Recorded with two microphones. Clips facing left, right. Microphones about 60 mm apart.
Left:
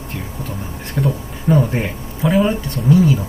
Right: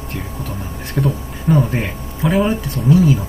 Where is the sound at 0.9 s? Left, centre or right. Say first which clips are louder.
Right 1 dB; centre.